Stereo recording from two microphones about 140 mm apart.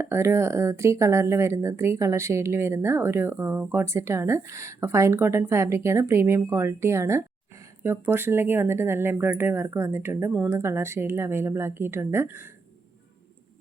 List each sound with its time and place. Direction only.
0.0 s speech: 20° right (ahead or behind)